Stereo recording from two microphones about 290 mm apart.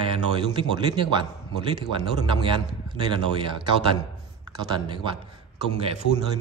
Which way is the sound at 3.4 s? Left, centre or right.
Centre.